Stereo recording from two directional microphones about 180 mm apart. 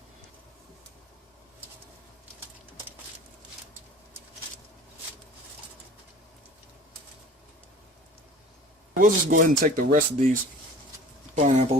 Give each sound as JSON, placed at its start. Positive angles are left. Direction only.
{"t": 9.0, "sound": "speech", "side_deg": -45}
{"t": 11.3, "sound": "speech", "side_deg": -40}